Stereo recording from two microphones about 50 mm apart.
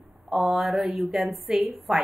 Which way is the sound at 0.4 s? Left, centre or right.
Centre.